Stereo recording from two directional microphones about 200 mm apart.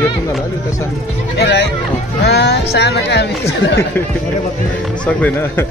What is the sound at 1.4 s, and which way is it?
Speech, 55° left (ahead or behind).